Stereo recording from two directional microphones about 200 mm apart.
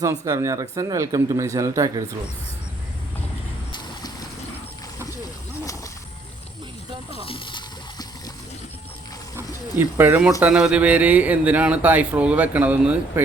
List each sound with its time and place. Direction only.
0.0 s speech: 15° right (ahead or behind)
3.7 s vehicle: 20° left (ahead or behind)
7.1 s a sound: 25° left (ahead or behind)
9.3 s speech: 10° right (ahead or behind)